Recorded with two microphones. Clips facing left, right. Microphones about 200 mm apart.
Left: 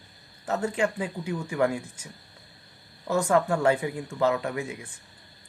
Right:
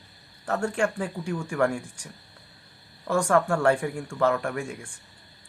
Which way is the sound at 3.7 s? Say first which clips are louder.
Right 1 dB; 5° left (ahead or behind).